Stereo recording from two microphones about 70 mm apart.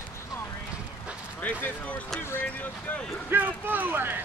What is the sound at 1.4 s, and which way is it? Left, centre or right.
Speech, left.